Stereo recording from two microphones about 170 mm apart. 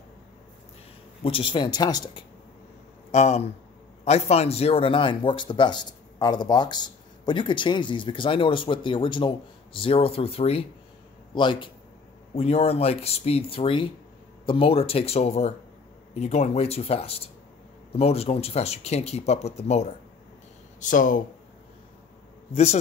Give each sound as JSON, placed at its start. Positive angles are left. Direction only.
{"t": 1.2, "sound": "speech", "side_deg": 30}
{"t": 3.1, "sound": "speech", "side_deg": 40}
{"t": 20.9, "sound": "speech", "side_deg": 50}
{"t": 22.5, "sound": "speech", "side_deg": 40}